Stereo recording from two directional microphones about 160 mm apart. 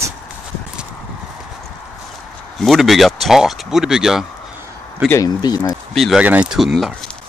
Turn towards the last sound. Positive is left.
turn(degrees=-5)  # may be behind; listen again after turning